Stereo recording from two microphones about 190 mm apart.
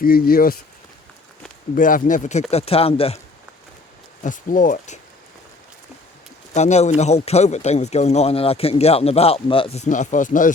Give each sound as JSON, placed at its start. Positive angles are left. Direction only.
{"t": 0.0, "sound": "speech", "side_deg": 50}
{"t": 1.7, "sound": "a man's voice", "side_deg": 45}
{"t": 4.2, "sound": "speech", "side_deg": 45}
{"t": 6.5, "sound": "a man's voice", "side_deg": 35}